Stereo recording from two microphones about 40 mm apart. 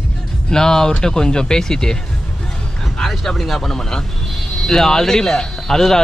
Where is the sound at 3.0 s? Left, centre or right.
Centre.